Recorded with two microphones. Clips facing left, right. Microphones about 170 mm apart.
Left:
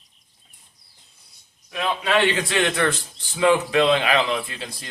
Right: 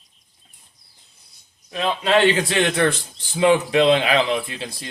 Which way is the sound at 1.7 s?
30° right (ahead or behind).